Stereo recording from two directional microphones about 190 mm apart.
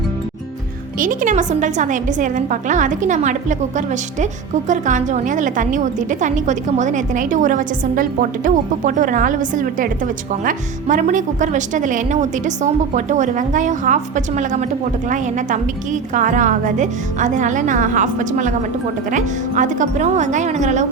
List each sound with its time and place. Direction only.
0.9 s a woman's voice: 45° right (ahead or behind)